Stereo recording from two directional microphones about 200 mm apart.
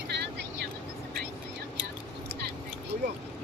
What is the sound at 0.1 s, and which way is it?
Vehicle, 60° right (ahead or behind).